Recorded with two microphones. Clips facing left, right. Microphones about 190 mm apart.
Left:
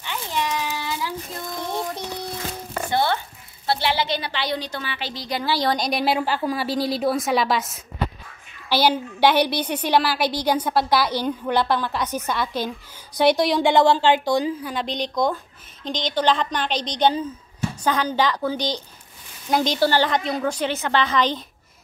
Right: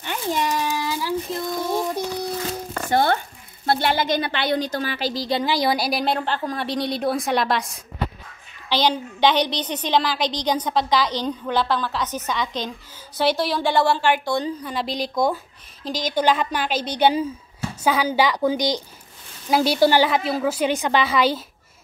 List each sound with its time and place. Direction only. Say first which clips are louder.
0.0 s a sound: right 3 dB; 45° right (ahead or behind)
1.7 s music: right 3 dB; 10° right (ahead or behind)
2.9 s a sound: right 3 dB; 45° right (ahead or behind)
3.6 s a woman's voice: right 2 dB; 50° right (ahead or behind)
5.4 s a woman's voice: left 1 dB; 15° right (ahead or behind); by 14.4 s 20° left (ahead or behind)
14.4 s a woman's voice: left 1 dB; 5° left (ahead or behind)